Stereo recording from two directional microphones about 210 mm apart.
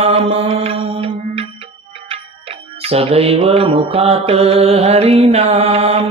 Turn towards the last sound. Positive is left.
turn(degrees=-30)  # may be behind; listen again after turning